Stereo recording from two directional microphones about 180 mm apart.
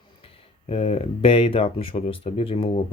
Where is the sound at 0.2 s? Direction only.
30° left (ahead or behind).